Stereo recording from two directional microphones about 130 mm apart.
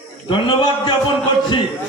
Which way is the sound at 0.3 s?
35° left (ahead or behind).